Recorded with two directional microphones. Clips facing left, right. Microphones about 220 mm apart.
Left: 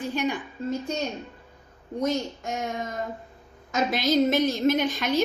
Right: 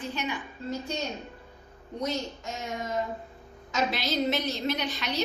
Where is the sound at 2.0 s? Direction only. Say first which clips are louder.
Left 5 dB; 50° left (ahead or behind).